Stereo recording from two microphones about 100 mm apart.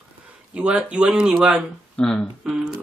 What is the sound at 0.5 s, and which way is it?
Speech, 10° right (ahead or behind).